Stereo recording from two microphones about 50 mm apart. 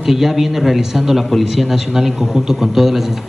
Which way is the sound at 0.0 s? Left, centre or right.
Centre.